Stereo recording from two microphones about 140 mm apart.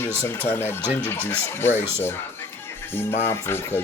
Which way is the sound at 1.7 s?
15° right (ahead or behind).